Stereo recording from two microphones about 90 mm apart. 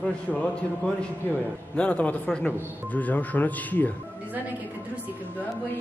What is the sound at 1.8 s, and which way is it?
Speech, 15° left (ahead or behind).